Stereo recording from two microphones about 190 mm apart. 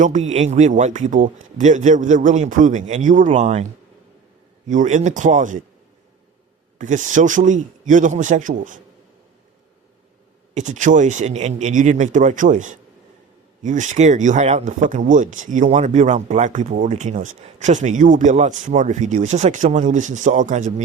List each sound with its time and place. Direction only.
0.0 s speech: 40° right (ahead or behind)
4.7 s speech: 40° right (ahead or behind)
6.7 s speech: 40° right (ahead or behind)
10.5 s speech: 40° right (ahead or behind)